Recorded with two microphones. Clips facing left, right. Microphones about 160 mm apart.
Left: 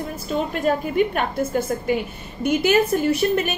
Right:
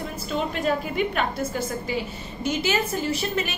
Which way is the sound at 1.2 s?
55° left (ahead or behind).